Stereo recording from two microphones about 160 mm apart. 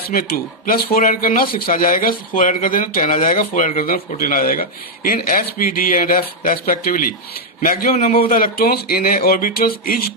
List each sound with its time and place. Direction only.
0.1 s speech: 65° left (ahead or behind)